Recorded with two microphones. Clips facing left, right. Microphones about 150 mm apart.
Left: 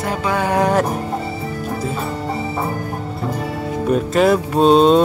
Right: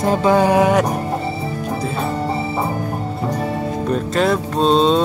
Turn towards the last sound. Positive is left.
turn(degrees=10)  # may be behind; listen again after turning